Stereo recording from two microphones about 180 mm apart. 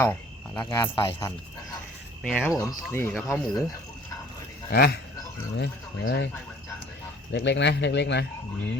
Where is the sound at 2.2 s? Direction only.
5° left (ahead or behind).